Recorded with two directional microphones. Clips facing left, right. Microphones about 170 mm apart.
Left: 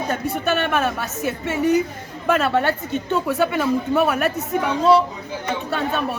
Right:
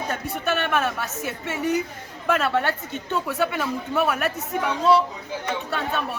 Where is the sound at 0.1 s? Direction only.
35° left (ahead or behind).